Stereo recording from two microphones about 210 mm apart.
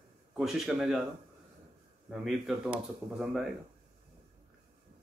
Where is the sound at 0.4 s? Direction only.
Centre (ahead or behind).